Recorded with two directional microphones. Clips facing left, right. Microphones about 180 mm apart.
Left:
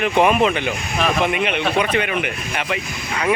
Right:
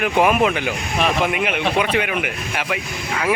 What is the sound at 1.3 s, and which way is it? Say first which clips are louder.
Speech: left 1 dB; 5° right (ahead or behind).